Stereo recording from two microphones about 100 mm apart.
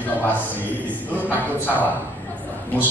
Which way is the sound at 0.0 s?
15° left (ahead or behind).